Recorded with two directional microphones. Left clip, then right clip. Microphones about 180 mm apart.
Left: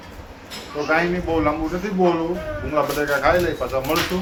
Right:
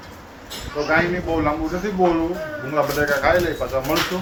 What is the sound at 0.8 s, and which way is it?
Speech, 5° left (ahead or behind).